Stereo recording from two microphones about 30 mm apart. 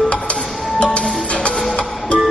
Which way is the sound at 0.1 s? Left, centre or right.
Left.